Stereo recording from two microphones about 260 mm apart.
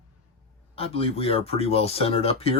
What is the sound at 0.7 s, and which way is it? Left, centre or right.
Speech, left.